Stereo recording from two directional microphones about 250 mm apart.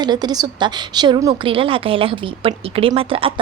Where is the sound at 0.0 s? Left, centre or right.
Centre.